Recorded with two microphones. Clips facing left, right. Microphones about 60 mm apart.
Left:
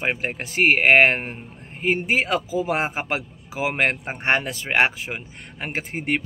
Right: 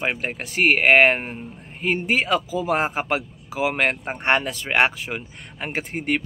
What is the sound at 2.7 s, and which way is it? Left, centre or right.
Speech, centre.